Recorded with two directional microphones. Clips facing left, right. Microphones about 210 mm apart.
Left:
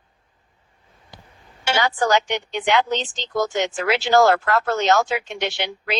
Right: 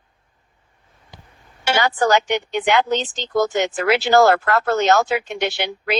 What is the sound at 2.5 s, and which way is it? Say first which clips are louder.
Speech: right 1 dB; 55° right (ahead or behind).